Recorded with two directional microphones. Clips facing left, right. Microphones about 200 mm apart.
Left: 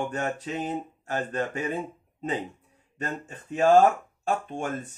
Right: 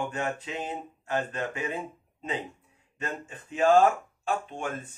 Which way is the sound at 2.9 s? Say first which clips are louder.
Left 2 dB; 40° left (ahead or behind).